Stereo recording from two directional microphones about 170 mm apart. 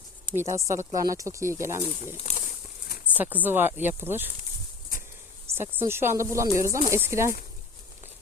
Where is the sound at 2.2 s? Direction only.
40° left (ahead or behind).